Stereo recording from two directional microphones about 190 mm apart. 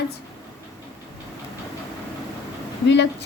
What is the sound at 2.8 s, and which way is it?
Speech, 65° left (ahead or behind).